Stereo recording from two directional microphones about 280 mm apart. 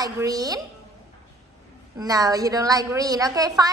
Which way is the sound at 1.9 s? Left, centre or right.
Centre.